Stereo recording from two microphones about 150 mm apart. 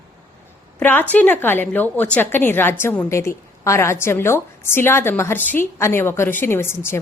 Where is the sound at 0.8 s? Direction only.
10° left (ahead or behind).